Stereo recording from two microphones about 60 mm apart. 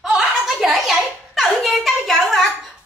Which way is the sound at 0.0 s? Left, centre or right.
Centre.